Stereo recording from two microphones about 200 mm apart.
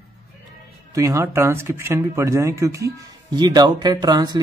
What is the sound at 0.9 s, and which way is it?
Speech, 15° right (ahead or behind).